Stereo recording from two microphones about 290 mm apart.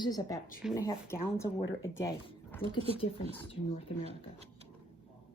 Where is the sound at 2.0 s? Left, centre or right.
Centre.